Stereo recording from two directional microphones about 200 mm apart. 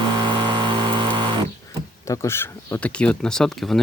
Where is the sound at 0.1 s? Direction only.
20° right (ahead or behind).